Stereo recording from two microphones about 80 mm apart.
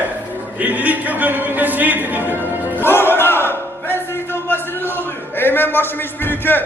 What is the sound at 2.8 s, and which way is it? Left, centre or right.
Battle cry, left.